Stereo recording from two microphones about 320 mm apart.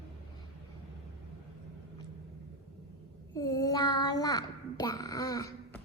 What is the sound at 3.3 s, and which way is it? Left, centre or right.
Child singing, centre.